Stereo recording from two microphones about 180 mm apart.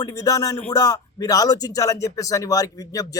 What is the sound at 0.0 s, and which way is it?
Speech, 20° left (ahead or behind).